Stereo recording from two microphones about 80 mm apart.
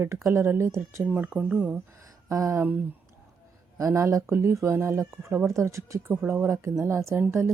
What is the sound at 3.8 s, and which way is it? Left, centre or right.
Speech, right.